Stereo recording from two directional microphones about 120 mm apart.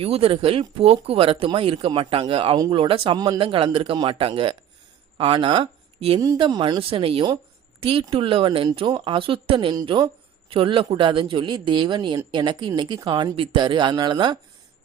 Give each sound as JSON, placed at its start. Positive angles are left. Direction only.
{"t": 0.0, "sound": "speech", "side_deg": -55}
{"t": 3.2, "sound": "speech", "side_deg": -35}
{"t": 3.4, "sound": "speech", "side_deg": -45}
{"t": 6.1, "sound": "speech", "side_deg": -30}
{"t": 6.6, "sound": "speech", "side_deg": -45}